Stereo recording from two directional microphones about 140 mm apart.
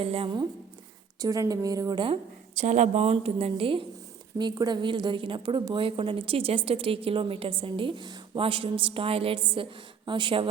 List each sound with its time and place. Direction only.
0.0 s a woman's voice: 40° right (ahead or behind)
1.2 s a woman's voice: 25° right (ahead or behind)
2.6 s a woman's voice: 55° right (ahead or behind); by 10.4 s 35° right (ahead or behind)